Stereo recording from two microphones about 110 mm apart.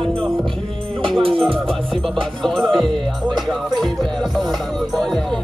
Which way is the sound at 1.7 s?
5° left (ahead or behind).